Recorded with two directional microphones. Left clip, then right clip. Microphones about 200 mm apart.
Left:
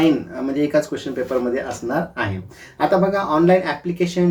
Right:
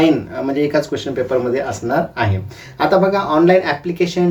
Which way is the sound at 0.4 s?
20° left (ahead or behind).